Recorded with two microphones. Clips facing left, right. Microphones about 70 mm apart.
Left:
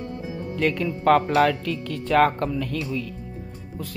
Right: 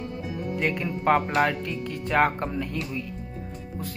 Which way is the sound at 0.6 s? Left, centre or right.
Centre.